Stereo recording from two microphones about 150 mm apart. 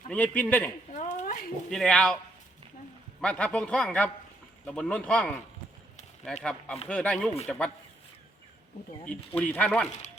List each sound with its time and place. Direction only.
0.1 s a man's voice: 10° left (ahead or behind)
0.9 s a sound: 55° left (ahead or behind)
1.7 s speech: 5° left (ahead or behind)
3.2 s a man's voice: 5° left (ahead or behind)
6.4 s a man's voice: 5° left (ahead or behind)
9.0 s a man's voice: 10° left (ahead or behind)